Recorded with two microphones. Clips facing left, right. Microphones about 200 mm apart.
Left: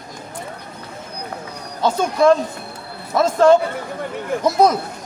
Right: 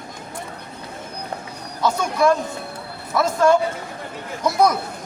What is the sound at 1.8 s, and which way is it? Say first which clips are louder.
Speech: left 3 dB; 25° left (ahead or behind).